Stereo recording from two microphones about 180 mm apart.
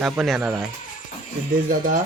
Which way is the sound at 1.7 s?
50° right (ahead or behind).